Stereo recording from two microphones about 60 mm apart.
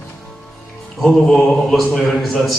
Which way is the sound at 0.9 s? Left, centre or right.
Centre.